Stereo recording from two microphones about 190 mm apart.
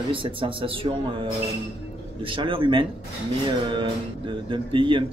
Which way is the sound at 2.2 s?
25° right (ahead or behind).